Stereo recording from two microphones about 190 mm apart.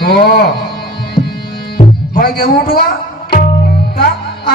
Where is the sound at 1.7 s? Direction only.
50° left (ahead or behind).